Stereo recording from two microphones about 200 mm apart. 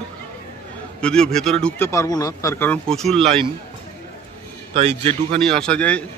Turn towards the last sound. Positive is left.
turn(degrees=5)  # may be behind; listen again after turning